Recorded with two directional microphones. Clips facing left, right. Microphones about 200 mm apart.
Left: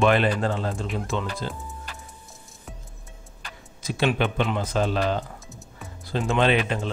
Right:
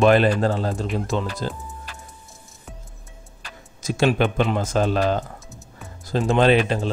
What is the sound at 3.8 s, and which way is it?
Speech, 45° right (ahead or behind).